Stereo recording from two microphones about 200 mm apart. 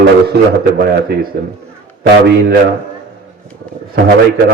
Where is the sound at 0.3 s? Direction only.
55° right (ahead or behind).